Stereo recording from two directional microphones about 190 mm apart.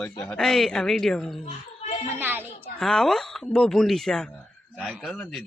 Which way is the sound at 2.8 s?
5° left (ahead or behind).